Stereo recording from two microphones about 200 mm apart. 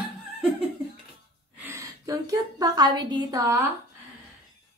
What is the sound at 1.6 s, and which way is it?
A woman's voice, 15° right (ahead or behind).